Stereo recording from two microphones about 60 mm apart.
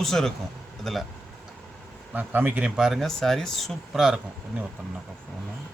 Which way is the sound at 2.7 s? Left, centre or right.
Centre.